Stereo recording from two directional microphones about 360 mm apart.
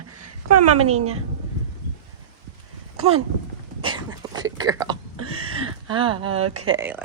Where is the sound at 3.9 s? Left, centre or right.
Centre.